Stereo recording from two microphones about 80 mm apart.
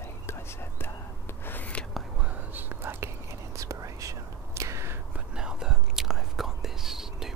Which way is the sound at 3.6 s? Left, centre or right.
Right.